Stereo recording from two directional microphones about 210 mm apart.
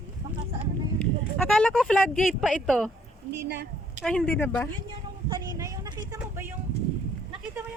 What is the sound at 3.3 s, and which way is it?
Speech, 50° right (ahead or behind).